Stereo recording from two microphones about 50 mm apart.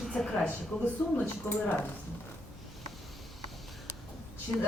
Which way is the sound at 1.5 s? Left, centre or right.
Left.